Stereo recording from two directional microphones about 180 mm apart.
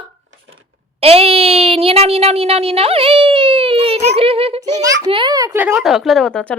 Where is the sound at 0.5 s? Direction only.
35° right (ahead or behind).